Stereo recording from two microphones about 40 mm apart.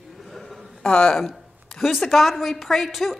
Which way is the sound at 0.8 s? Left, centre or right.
Centre.